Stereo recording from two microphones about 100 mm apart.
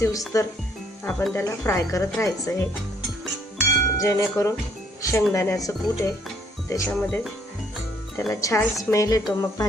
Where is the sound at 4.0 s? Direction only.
35° left (ahead or behind).